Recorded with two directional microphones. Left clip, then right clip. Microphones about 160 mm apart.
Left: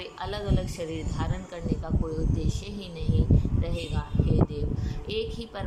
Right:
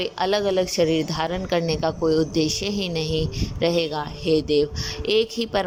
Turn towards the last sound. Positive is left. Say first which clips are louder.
# right 11 dB
turn(degrees=-50)  # may be behind; listen again after turning